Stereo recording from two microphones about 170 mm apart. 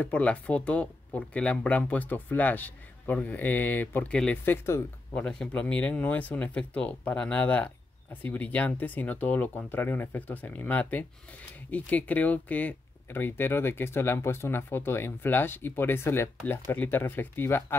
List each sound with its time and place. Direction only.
0.0 s speech: 10° left (ahead or behind)